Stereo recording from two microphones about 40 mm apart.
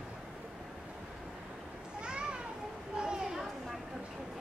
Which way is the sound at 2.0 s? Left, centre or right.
Right.